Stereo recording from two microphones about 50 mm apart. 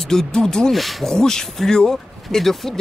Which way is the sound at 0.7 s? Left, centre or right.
Centre.